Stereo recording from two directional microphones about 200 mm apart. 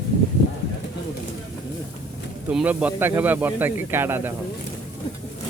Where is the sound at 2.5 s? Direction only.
5° right (ahead or behind).